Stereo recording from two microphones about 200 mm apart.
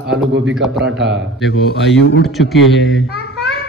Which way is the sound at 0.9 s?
65° right (ahead or behind).